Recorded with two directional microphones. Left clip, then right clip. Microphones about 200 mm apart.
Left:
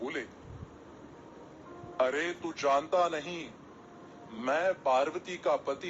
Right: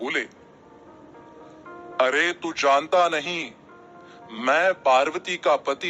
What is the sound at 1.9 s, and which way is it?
A man's voice, 30° right (ahead or behind).